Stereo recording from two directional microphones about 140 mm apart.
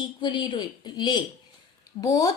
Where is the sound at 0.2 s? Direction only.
35° left (ahead or behind).